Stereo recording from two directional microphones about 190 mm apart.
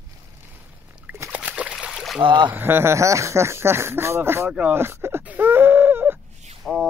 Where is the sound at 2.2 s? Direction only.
25° right (ahead or behind).